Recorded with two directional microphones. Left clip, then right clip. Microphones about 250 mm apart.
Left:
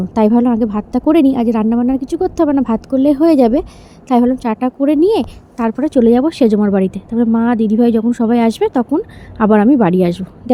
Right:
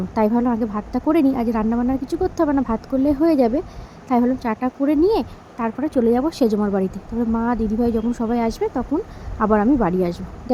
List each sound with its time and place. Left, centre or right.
0.1 s a woman's voice: centre